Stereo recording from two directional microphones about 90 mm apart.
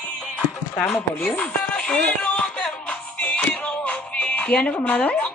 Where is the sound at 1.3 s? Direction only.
15° left (ahead or behind).